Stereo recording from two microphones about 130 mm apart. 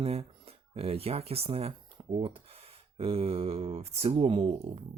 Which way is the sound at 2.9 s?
45° right (ahead or behind).